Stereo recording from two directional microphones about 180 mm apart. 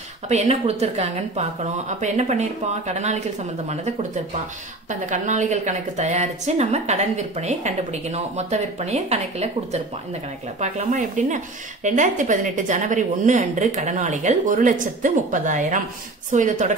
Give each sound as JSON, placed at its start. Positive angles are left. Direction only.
{"t": 0.3, "sound": "a woman's voice", "side_deg": -35}
{"t": 5.1, "sound": "a woman's voice", "side_deg": -45}